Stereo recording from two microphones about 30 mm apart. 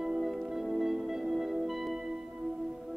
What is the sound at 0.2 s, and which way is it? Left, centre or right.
Music, centre.